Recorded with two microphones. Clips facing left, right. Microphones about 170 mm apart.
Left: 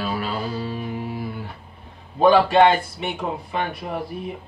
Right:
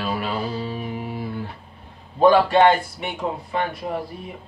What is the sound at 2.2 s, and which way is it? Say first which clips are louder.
Speech: even; 20° left (ahead or behind).